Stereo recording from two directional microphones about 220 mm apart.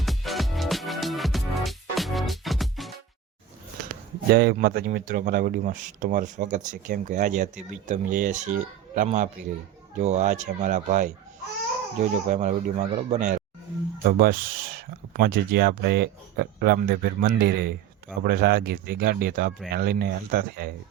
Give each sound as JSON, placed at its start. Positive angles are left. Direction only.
{"t": 0.0, "sound": "music", "side_deg": 0}
{"t": 4.3, "sound": "speech", "side_deg": -45}